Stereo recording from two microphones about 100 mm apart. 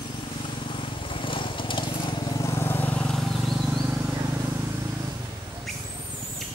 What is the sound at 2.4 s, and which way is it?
Vehicle, 25° left (ahead or behind).